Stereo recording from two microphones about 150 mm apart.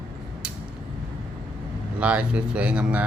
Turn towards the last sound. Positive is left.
turn(degrees=-10)  # may be behind; listen again after turning